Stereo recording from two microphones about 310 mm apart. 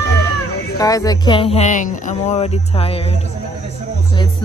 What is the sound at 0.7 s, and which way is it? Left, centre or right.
Speech, centre.